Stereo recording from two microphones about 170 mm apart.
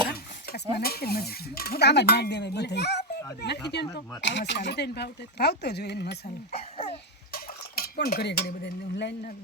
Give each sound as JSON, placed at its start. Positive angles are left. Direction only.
{"t": 0.8, "sound": "speech", "side_deg": 65}
{"t": 6.5, "sound": "a sound", "side_deg": 35}
{"t": 6.9, "sound": "dishes", "side_deg": 60}